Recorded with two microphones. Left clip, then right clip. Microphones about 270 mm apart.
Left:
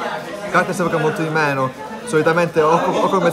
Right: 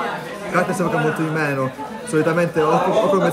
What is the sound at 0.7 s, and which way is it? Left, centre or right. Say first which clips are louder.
A man's voice: left 1 dB; centre.